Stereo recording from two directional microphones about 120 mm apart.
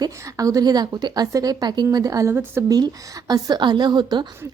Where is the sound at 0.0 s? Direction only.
30° right (ahead or behind).